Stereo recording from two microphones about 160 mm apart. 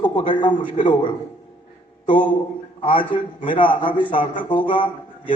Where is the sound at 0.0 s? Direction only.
30° left (ahead or behind).